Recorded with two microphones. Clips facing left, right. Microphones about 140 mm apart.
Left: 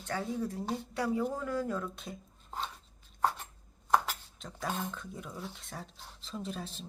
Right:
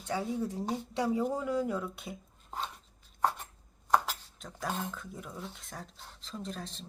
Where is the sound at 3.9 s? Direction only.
Centre (ahead or behind).